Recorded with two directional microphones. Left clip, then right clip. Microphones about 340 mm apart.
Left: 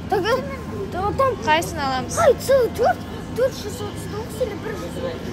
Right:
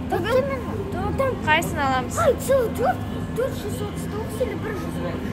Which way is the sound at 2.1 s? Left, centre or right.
Left.